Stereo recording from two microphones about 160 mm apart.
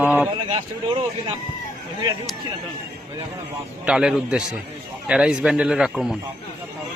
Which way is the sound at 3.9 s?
5° right (ahead or behind).